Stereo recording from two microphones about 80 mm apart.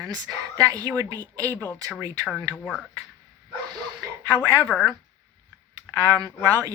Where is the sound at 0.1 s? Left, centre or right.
Right.